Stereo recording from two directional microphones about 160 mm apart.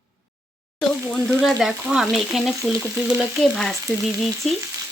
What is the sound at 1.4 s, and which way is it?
Frying, centre (ahead or behind).